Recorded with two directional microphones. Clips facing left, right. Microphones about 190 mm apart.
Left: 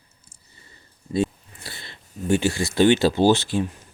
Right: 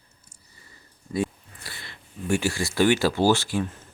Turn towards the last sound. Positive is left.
turn(degrees=15)  # may be behind; listen again after turning